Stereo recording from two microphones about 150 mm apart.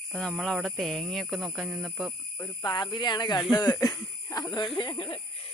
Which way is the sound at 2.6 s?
30° left (ahead or behind).